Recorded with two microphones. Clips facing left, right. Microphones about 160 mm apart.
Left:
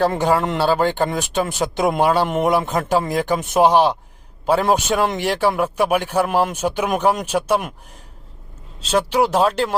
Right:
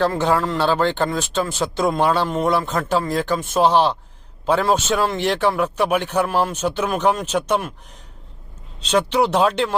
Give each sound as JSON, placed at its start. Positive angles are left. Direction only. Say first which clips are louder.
{"t": 0.0, "sound": "speech", "louder": "left 1 dB", "side_deg": 10}
{"t": 8.8, "sound": "speech", "louder": "even", "side_deg": 5}